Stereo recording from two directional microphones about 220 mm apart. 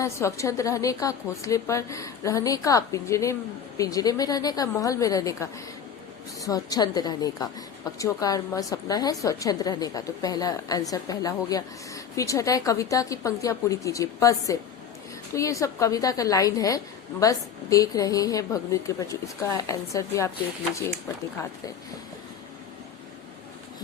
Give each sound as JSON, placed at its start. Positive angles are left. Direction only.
{"t": 0.0, "sound": "a woman's voice", "side_deg": 15}